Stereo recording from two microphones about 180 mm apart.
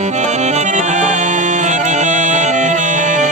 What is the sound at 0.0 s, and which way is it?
Accordion, 40° right (ahead or behind).